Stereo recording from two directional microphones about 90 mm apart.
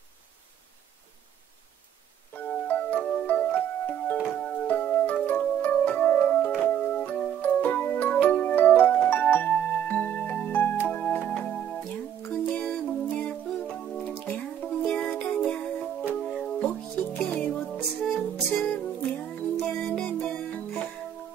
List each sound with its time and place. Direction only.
2.3 s music: 20° left (ahead or behind)
10.9 s organ: 20° left (ahead or behind)
12.3 s music: 15° left (ahead or behind)
16.5 s music: 15° left (ahead or behind)